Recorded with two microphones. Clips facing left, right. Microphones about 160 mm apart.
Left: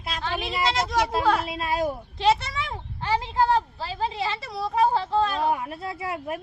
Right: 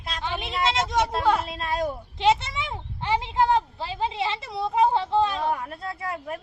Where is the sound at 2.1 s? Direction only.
20° right (ahead or behind).